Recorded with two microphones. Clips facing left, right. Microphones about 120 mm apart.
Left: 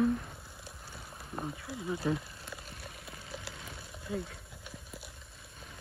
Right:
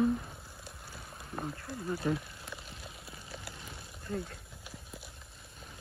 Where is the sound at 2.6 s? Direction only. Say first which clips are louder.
Left 1 dB; 55° left (ahead or behind).